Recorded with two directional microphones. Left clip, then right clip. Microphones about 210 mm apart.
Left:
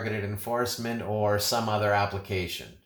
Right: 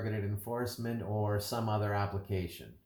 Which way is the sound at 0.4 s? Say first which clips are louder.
Left 9 dB; 25° left (ahead or behind).